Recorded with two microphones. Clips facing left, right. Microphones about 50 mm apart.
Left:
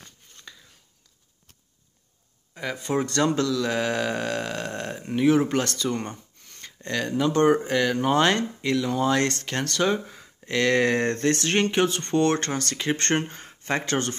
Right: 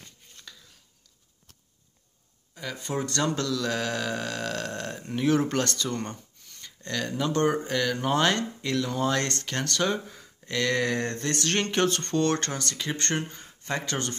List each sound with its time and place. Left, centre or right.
0.5 s a sound: left
2.5 s speech: left
4.5 s speech: centre
6.5 s a sound: left
7.2 s speech: left
8.8 s speech: centre; by 11.2 s left
11.2 s speech: left